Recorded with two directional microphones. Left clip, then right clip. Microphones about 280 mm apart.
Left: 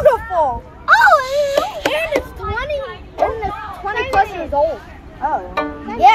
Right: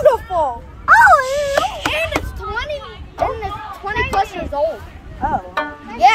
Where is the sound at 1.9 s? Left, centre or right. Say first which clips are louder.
Left 2 dB; right.